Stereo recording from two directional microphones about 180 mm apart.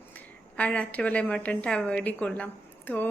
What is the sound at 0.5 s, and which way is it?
A woman's voice, 5° left (ahead or behind).